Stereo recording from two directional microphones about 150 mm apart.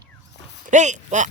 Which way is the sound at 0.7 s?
55° right (ahead or behind).